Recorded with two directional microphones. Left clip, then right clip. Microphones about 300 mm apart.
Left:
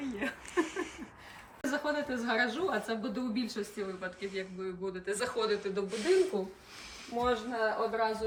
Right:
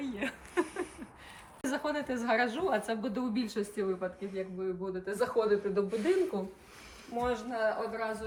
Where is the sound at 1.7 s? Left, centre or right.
Centre.